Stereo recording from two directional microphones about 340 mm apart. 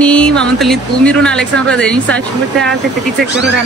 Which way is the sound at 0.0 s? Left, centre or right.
Centre.